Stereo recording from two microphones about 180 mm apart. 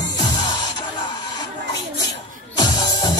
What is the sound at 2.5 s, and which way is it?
Music, 25° left (ahead or behind).